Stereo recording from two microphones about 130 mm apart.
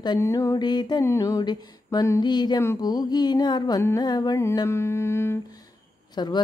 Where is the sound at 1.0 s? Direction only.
25° left (ahead or behind).